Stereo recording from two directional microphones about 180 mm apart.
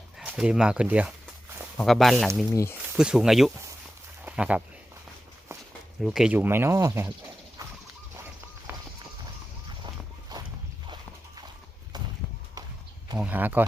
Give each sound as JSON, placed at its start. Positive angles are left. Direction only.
{"t": 0.2, "sound": "speech", "side_deg": -5}
{"t": 2.5, "sound": "speech", "side_deg": 15}
{"t": 2.9, "sound": "speech", "side_deg": -5}
{"t": 6.0, "sound": "speech", "side_deg": 0}
{"t": 7.6, "sound": "horse", "side_deg": -20}
{"t": 9.8, "sound": "a sound", "side_deg": -20}
{"t": 13.1, "sound": "speech", "side_deg": -10}